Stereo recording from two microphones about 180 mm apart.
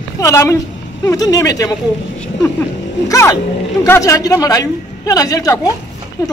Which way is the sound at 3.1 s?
20° left (ahead or behind).